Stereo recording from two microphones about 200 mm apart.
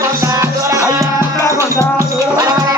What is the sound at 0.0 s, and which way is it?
Music, 15° right (ahead or behind).